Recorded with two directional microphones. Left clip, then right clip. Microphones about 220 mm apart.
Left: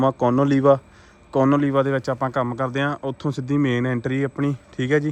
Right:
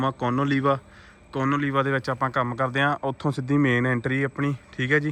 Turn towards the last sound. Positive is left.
turn(degrees=15)  # may be behind; listen again after turning